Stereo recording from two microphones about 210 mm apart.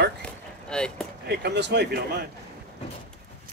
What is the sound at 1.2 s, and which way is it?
Speech, 50° right (ahead or behind).